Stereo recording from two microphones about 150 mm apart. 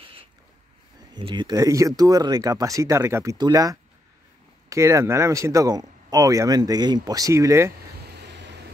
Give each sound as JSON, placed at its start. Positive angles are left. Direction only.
{"t": 1.1, "sound": "speech", "side_deg": -30}
{"t": 8.1, "sound": "vehicle", "side_deg": -90}